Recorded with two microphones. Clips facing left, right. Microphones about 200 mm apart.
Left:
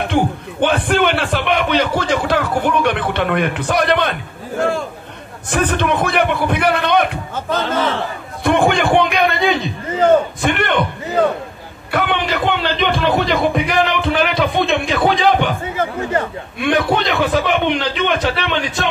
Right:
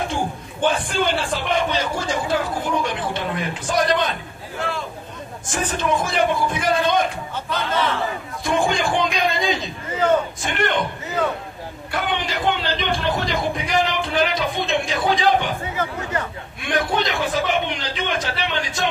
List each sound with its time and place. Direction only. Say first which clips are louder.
0.0 s a man's voice: left 7 dB; 65° left (ahead or behind)
7.3 s a man's voice: left 5 dB; 45° left (ahead or behind)
8.5 s a man's voice: left 6 dB; 65° left (ahead or behind)
11.9 s music: left 6 dB; 65° left (ahead or behind)
16.6 s a man's voice: left 6 dB; 65° left (ahead or behind)